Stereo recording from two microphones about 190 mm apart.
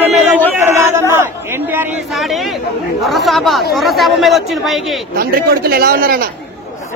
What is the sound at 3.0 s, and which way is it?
Speech, centre (ahead or behind).